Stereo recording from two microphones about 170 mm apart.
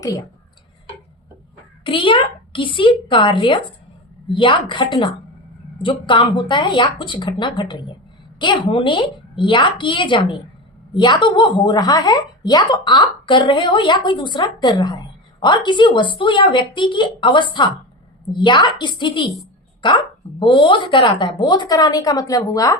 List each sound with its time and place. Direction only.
1.8 s a woman's voice: 30° left (ahead or behind)